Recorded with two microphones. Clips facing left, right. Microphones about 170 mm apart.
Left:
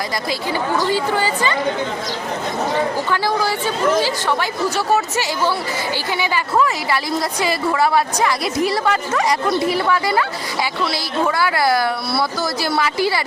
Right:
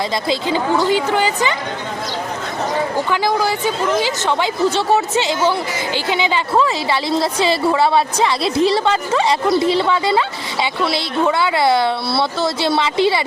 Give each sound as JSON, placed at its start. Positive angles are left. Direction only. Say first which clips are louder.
{"t": 0.3, "sound": "a woman's voice", "louder": "right 4 dB", "side_deg": -20}
{"t": 3.1, "sound": "a woman's voice", "louder": "right 2 dB", "side_deg": -15}